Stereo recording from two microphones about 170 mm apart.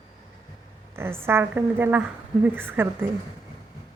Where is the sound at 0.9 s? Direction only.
15° right (ahead or behind).